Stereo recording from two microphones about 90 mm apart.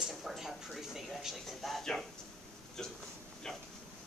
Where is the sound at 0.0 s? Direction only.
Centre (ahead or behind).